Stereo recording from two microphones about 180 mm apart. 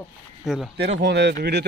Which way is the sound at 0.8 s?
70° right (ahead or behind).